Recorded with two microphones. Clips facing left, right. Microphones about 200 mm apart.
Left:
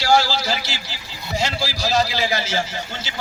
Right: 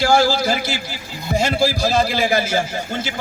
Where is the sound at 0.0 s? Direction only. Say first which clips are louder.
Right 3 dB; 50° right (ahead or behind).